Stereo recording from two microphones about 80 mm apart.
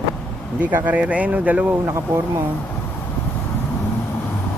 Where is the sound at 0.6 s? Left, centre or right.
Centre.